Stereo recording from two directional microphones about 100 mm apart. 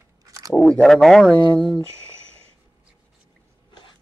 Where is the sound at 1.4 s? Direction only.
50° left (ahead or behind).